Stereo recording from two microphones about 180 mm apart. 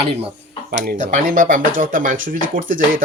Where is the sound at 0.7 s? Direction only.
45° right (ahead or behind).